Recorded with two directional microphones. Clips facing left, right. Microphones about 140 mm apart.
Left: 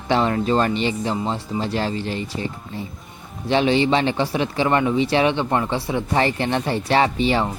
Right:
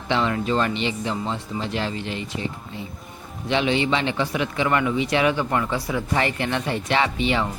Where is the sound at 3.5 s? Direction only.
35° left (ahead or behind).